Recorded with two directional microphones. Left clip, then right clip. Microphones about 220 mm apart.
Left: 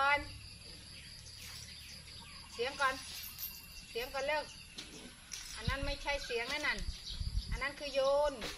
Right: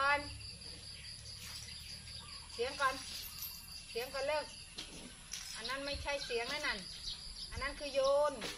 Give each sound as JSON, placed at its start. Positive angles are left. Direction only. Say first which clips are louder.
{"t": 2.6, "sound": "a sound", "louder": "left 1 dB", "side_deg": 35}
{"t": 3.9, "sound": "speech", "louder": "left 1 dB", "side_deg": 30}
{"t": 5.6, "sound": "speech", "louder": "left 1 dB", "side_deg": 30}